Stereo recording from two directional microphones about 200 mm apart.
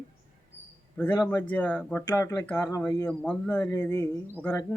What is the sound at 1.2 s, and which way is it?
Speech, 15° left (ahead or behind).